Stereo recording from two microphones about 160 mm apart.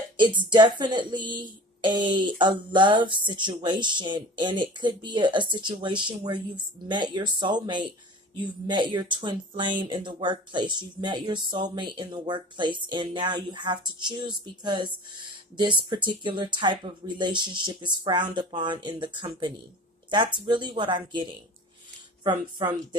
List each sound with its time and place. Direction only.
0.2 s a woman's voice: 30° right (ahead or behind)